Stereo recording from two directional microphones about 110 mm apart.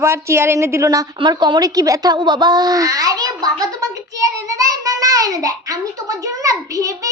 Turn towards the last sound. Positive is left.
turn(degrees=-30)  # may be behind; listen again after turning